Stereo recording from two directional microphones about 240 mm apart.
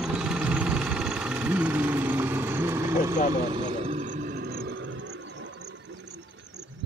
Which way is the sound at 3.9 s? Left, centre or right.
Right.